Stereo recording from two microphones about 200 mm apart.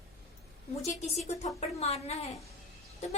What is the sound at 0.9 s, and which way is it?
A woman's voice, 35° left (ahead or behind).